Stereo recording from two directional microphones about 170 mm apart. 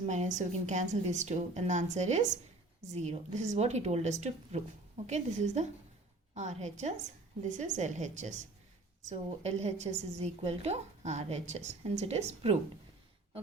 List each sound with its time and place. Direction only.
0.0 s a woman's voice: 45° right (ahead or behind)